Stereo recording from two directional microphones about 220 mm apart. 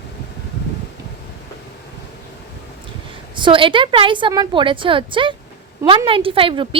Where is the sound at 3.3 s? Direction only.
20° right (ahead or behind).